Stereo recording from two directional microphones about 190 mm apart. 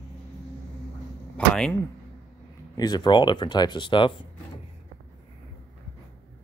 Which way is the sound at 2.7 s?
20° left (ahead or behind).